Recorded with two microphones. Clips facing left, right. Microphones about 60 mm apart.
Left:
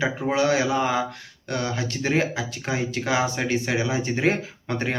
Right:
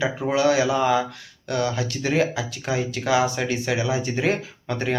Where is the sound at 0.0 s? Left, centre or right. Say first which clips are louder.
Right 1 dB; left.